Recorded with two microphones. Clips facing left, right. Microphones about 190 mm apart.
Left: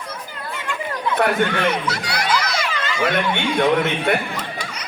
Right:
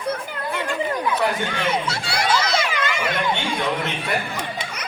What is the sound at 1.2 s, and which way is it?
Speech, 60° left (ahead or behind).